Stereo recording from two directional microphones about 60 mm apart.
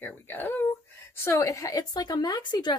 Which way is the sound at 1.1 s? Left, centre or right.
Left.